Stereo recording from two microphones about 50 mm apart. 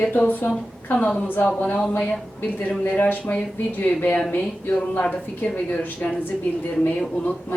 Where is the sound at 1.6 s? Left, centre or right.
Left.